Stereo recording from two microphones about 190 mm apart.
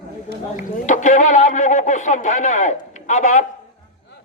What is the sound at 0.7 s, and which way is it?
Speech, 40° left (ahead or behind).